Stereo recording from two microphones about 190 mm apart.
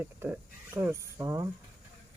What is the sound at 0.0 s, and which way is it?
Speech, 10° right (ahead or behind).